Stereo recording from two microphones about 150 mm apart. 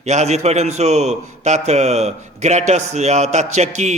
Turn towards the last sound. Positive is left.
turn(degrees=-50)  # may be behind; listen again after turning